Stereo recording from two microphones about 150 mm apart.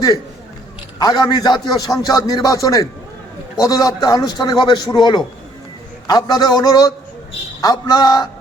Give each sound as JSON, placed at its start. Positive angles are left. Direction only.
{"t": 0.9, "sound": "a man's voice", "side_deg": 25}